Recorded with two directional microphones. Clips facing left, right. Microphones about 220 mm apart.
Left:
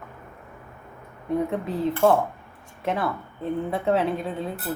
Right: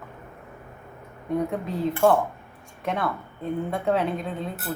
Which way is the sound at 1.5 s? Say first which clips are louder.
Left 1 dB; centre (ahead or behind).